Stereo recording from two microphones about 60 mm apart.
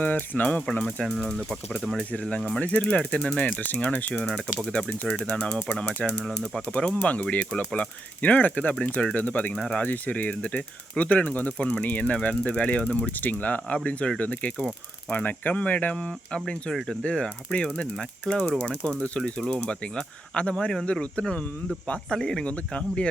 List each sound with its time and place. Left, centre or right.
0.0 s speech: left
0.4 s speech: centre
1.8 s speech: centre
2.6 s speech: left
3.6 s speech: left
4.1 s speech: centre
6.7 s speech: centre
9.6 s speech: centre
9.8 s speech: left
16.7 s speech: centre
17.0 s speech: centre